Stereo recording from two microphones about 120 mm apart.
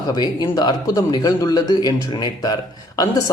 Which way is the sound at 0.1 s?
35° left (ahead or behind).